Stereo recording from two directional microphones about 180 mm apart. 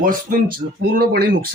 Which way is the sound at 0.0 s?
50° right (ahead or behind).